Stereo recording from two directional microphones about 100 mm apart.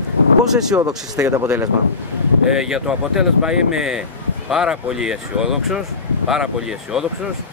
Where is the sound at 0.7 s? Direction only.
25° right (ahead or behind).